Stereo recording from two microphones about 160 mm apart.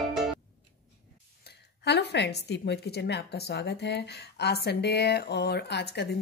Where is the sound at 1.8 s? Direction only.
90° left.